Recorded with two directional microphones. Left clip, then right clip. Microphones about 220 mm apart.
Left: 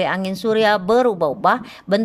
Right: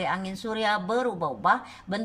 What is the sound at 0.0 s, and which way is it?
Speech, 40° left (ahead or behind).